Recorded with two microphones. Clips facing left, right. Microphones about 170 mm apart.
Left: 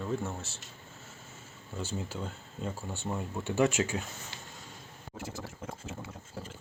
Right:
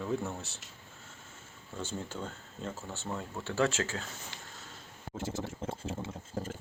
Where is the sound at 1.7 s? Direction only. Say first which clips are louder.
Left 1 dB; 10° left (ahead or behind).